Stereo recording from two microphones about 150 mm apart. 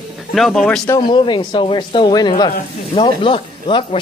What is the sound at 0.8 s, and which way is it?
Speech, 30° left (ahead or behind).